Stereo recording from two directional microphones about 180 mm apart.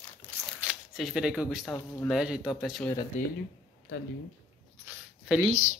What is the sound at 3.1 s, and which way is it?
Speech, 45° left (ahead or behind).